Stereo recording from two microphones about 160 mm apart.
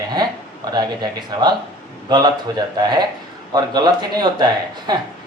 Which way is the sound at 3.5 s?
25° right (ahead or behind).